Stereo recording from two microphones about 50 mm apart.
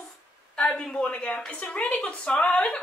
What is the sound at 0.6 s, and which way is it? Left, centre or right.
A woman's voice, centre.